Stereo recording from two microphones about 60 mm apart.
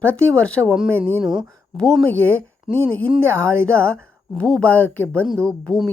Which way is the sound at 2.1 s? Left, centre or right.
Left.